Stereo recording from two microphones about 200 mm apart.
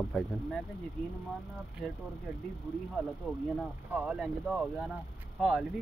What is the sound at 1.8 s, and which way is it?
Speech, centre (ahead or behind).